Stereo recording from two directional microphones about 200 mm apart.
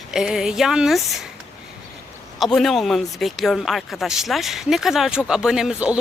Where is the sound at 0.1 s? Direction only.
5° right (ahead or behind).